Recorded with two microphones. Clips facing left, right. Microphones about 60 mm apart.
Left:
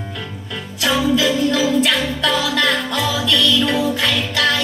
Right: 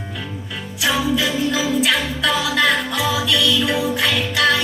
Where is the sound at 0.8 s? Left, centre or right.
Centre.